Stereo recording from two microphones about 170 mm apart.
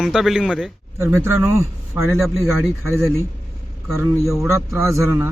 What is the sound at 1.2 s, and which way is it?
A man's voice, 15° right (ahead or behind).